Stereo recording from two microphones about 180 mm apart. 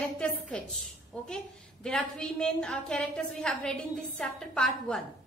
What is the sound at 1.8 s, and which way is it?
A woman's voice, 5° left (ahead or behind).